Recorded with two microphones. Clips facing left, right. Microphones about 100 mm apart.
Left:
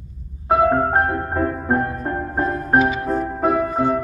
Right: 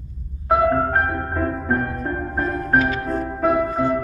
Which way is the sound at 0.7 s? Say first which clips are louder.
Left 2 dB; 20° left (ahead or behind).